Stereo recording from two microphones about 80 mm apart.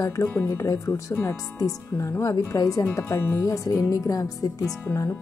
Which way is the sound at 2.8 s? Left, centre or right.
Left.